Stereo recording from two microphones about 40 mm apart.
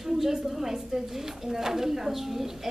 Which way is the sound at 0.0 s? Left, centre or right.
Centre.